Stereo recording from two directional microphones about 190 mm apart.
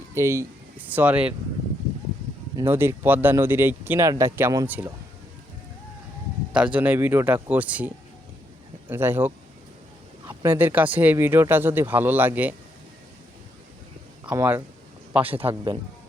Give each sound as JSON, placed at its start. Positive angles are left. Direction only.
{"t": 0.1, "sound": "speech", "side_deg": -15}
{"t": 2.6, "sound": "speech", "side_deg": -10}
{"t": 6.5, "sound": "speech", "side_deg": -5}
{"t": 8.9, "sound": "speech", "side_deg": -10}
{"t": 14.3, "sound": "speech", "side_deg": -10}
{"t": 15.3, "sound": "a man's voice", "side_deg": -30}